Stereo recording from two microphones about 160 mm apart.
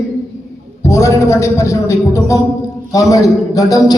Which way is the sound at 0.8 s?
20° left (ahead or behind).